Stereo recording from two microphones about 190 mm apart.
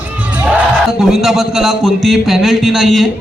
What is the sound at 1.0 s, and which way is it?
A man's voice, centre (ahead or behind).